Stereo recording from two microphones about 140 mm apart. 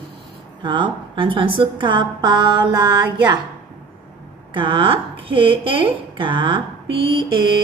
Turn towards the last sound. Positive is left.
turn(degrees=-35)  # may be behind; listen again after turning